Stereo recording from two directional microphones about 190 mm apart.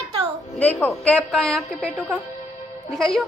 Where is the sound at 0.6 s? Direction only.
10° left (ahead or behind).